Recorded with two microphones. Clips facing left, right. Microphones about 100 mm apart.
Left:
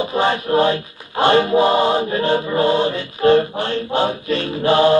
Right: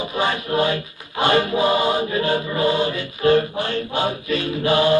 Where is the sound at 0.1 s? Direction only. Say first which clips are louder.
Left 4 dB; 30° left (ahead or behind).